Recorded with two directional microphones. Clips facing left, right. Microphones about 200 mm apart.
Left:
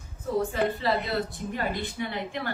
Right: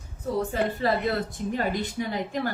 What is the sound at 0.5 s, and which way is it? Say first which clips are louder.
A woman's voice: right 1 dB; 50° right (ahead or behind).